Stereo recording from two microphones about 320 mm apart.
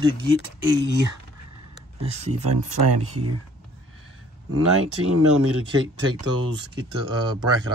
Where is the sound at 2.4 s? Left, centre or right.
Right.